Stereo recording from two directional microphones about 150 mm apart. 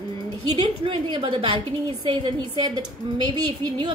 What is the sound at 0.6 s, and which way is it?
A woman's voice, 30° right (ahead or behind).